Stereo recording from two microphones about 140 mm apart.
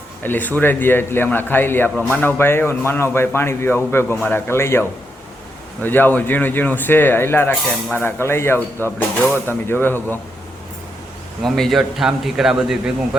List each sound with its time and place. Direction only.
0.2 s a man's voice: 15° left (ahead or behind)
11.4 s a man's voice: centre (ahead or behind)